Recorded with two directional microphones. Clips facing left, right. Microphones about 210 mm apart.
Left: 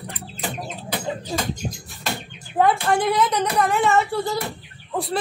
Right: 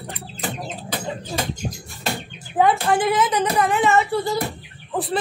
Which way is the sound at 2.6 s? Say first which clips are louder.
Right 1 dB; centre (ahead or behind).